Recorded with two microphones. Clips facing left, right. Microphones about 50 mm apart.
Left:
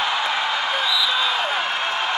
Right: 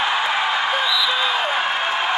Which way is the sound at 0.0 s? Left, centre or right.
Right.